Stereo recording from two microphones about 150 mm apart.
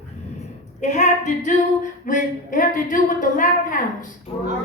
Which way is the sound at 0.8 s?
50° left (ahead or behind).